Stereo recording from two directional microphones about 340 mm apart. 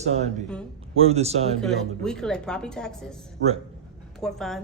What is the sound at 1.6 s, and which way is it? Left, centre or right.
A woman's voice, centre.